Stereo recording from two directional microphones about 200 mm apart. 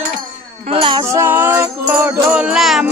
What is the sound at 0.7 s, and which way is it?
Music, 25° right (ahead or behind).